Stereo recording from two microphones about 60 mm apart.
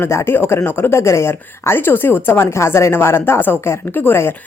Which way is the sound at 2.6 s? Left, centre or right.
Left.